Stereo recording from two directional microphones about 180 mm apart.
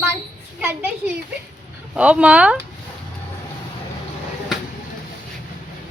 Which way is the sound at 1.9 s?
5° right (ahead or behind).